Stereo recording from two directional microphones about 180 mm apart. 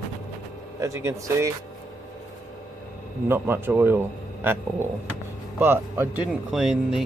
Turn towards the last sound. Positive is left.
turn(degrees=0)  # may be behind; listen again after turning